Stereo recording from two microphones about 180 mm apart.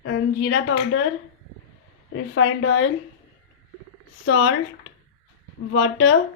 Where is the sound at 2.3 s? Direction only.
90° left.